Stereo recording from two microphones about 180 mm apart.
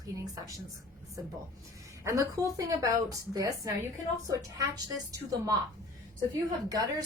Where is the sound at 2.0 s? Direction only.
20° right (ahead or behind).